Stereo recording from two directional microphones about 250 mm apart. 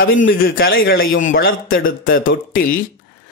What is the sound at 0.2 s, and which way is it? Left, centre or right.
A man's voice, left.